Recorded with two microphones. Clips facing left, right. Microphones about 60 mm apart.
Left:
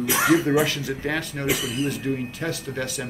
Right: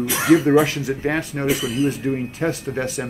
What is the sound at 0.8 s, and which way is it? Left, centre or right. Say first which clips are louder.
Speech: right 4 dB; right.